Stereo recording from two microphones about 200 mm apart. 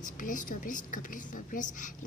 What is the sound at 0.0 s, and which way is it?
Speech, 40° left (ahead or behind).